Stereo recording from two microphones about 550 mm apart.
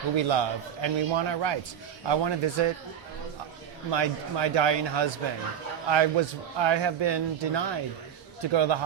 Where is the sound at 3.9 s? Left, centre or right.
Right.